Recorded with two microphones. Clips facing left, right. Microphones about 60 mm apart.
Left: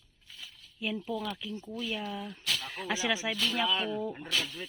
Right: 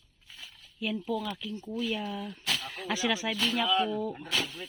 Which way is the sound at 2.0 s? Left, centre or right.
Centre.